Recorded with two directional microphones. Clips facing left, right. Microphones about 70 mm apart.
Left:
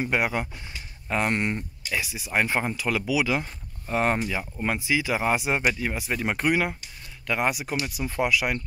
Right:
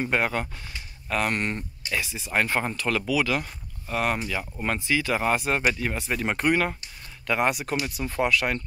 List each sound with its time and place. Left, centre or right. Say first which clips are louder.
0.0 s speech: even; centre; by 4.3 s left
4.6 s speech: even; centre